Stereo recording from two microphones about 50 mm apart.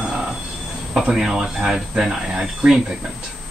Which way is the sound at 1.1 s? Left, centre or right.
Centre.